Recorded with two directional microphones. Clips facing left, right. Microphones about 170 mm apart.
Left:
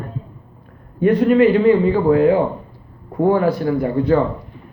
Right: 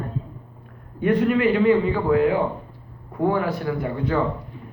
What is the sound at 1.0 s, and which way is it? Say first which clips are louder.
A man's voice: left 6 dB; 35° left (ahead or behind).